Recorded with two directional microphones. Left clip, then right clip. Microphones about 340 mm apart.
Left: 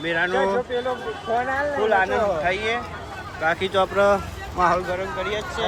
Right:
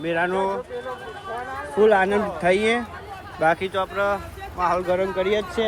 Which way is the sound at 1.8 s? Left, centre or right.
Centre.